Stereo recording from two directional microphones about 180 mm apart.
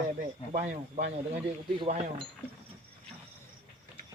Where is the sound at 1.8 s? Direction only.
30° right (ahead or behind).